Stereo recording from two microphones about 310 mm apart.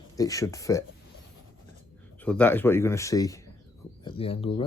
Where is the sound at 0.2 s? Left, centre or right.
Centre.